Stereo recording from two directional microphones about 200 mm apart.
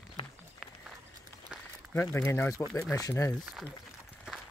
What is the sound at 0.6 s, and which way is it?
Run, 5° right (ahead or behind).